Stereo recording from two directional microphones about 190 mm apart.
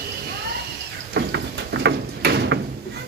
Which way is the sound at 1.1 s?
60° right (ahead or behind).